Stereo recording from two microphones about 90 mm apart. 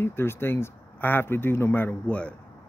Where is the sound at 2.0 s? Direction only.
15° left (ahead or behind).